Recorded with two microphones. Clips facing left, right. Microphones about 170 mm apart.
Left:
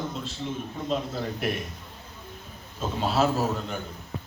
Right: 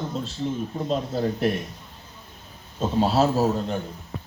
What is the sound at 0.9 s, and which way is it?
Speech, 35° right (ahead or behind).